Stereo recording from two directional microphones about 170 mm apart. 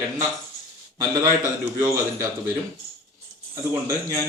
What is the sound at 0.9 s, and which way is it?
Speech, 20° right (ahead or behind).